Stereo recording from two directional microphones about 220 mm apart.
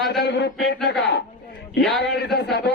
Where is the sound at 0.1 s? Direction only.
50° left (ahead or behind).